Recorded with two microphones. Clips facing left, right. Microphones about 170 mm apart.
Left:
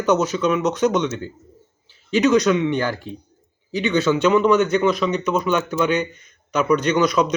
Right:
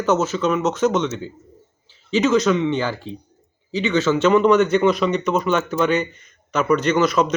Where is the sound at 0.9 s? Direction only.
15° left (ahead or behind).